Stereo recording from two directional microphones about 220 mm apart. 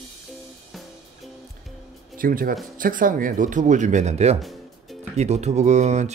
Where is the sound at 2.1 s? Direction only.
40° right (ahead or behind).